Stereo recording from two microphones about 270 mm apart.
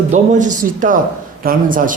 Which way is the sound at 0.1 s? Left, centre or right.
Right.